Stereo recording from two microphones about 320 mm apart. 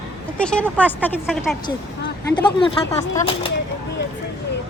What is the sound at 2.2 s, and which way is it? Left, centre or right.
Speech, centre.